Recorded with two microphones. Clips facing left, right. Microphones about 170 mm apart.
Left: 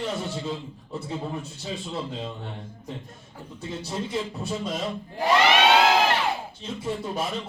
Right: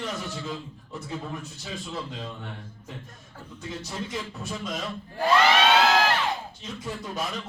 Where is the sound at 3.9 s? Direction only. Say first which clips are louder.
Left 6 dB; 25° left (ahead or behind).